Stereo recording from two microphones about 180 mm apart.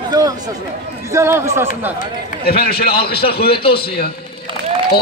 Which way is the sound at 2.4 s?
55° left (ahead or behind).